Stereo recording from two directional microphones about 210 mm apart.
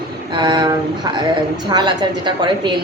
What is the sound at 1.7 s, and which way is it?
Speech, 20° right (ahead or behind).